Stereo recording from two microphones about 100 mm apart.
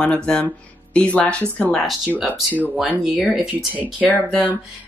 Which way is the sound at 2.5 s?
15° left (ahead or behind).